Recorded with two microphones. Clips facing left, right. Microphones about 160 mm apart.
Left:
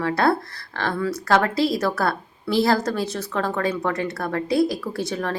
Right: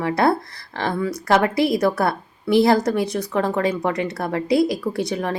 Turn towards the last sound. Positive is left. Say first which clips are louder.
# right 3 dB
turn(degrees=-20)  # may be behind; listen again after turning